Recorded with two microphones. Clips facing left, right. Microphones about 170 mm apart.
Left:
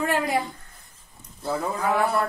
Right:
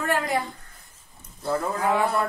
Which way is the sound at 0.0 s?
15° left (ahead or behind).